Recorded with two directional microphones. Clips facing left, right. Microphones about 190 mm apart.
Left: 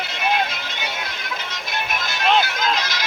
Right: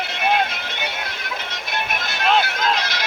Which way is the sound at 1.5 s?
60° right (ahead or behind).